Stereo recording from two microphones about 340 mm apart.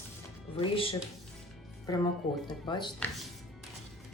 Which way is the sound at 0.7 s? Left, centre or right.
Centre.